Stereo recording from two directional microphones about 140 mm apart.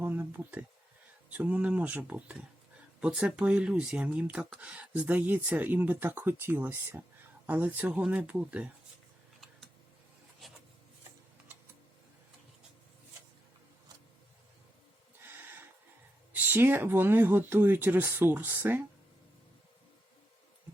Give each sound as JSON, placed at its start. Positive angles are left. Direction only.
{"t": 0.0, "sound": "a sound", "side_deg": -15}
{"t": 1.3, "sound": "speech", "side_deg": -10}
{"t": 10.4, "sound": "rub", "side_deg": 0}
{"t": 16.3, "sound": "speech", "side_deg": -15}